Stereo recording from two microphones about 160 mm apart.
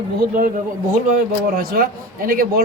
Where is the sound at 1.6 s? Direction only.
70° right (ahead or behind).